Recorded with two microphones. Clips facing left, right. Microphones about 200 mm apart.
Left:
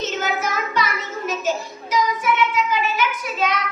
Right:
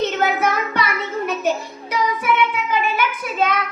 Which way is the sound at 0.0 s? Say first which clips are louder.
Right 5 dB; 60° right (ahead or behind).